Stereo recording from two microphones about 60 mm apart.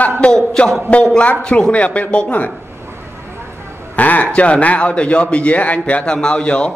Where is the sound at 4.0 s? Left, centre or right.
Left.